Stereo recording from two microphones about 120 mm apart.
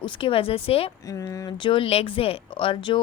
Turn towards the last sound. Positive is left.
turn(degrees=45)  # may be behind; listen again after turning